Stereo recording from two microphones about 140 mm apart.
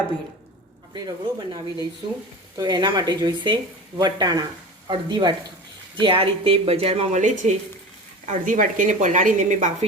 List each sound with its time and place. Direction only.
0.9 s speech: 30° right (ahead or behind); by 7.5 s 60° right (ahead or behind)
8.3 s a woman's voice: 70° right (ahead or behind)